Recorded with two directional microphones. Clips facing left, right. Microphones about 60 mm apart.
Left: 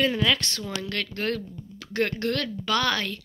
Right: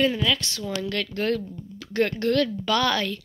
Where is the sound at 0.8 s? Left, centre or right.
Centre.